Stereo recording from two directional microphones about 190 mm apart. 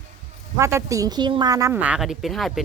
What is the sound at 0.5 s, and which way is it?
A woman's voice, 15° right (ahead or behind).